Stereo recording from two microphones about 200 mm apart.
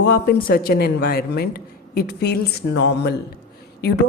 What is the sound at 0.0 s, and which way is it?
A woman's voice, 50° left (ahead or behind).